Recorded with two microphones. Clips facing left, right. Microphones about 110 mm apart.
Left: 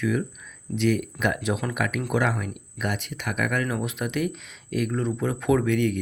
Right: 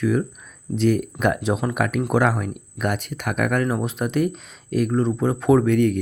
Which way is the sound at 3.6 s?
35° right (ahead or behind).